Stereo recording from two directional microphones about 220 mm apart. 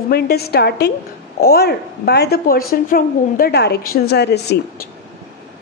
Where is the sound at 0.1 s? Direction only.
45° left (ahead or behind).